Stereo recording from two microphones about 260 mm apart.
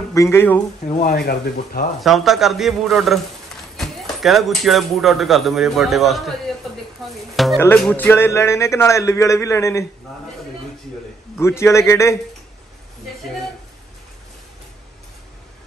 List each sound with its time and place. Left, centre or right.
0.1 s speech: centre
0.8 s speech: left
2.0 s speech: centre
7.3 s speech: centre
11.3 s speech: centre